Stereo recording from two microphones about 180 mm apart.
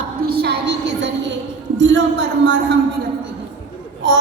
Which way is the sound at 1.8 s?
90° right.